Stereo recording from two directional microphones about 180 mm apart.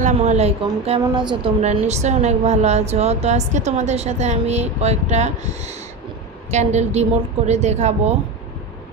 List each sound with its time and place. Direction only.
0.0 s a woman's voice: 40° right (ahead or behind)